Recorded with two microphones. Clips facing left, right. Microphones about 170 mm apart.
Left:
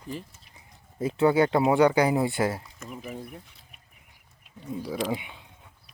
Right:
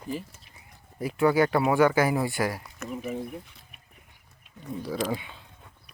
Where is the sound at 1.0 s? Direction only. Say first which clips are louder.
Left 1 dB; 25° left (ahead or behind).